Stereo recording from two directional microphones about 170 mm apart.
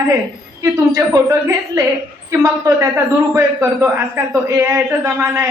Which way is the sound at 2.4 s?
15° right (ahead or behind).